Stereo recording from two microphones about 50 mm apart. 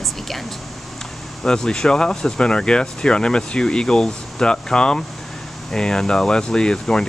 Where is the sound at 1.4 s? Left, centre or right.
Centre.